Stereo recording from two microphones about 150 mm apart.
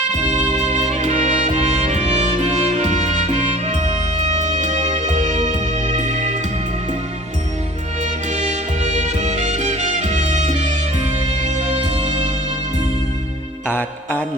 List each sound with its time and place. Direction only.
0.3 s music: 50° right (ahead or behind)
8.3 s music: 50° right (ahead or behind)
13.7 s music: 15° left (ahead or behind)